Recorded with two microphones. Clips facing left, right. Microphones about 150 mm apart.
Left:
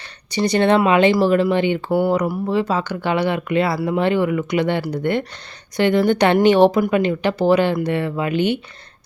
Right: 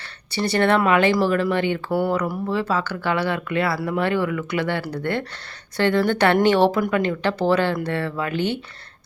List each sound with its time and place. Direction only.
0.3 s speech: 15° left (ahead or behind)